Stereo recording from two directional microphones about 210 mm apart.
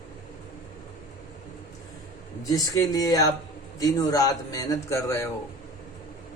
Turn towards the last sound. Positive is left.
turn(degrees=15)  # may be behind; listen again after turning